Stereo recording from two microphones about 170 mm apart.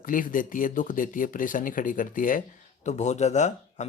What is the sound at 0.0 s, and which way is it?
Speech, 55° left (ahead or behind).